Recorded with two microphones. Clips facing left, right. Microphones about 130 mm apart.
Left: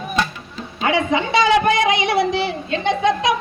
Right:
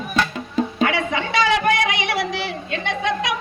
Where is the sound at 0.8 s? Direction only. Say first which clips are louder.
Left 7 dB; 25° left (ahead or behind).